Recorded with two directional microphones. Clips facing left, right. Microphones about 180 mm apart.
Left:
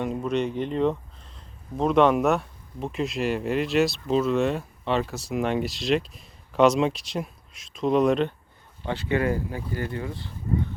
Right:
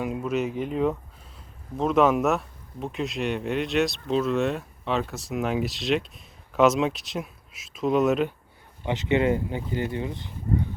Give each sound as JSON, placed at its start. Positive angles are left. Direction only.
{"t": 0.0, "sound": "speech", "side_deg": -5}
{"t": 8.8, "sound": "speech", "side_deg": -20}